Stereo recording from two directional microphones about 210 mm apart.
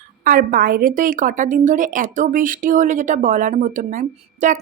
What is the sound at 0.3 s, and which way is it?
Speech, 40° right (ahead or behind).